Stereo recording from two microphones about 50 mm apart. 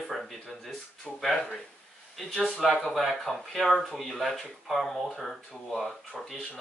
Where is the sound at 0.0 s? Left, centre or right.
Centre.